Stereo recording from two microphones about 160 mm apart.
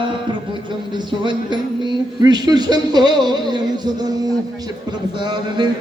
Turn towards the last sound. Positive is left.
turn(degrees=-30)  # may be behind; listen again after turning